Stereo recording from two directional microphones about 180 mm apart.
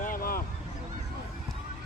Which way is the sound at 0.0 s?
55° left (ahead or behind).